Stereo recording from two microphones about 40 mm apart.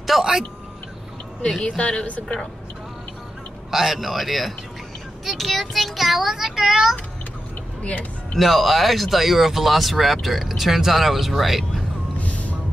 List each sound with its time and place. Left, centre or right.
0.0 s a sound: centre
1.6 s a woman's voice: left
3.7 s speech: centre
7.8 s speech: left
8.4 s speech: centre
12.2 s vehicle: left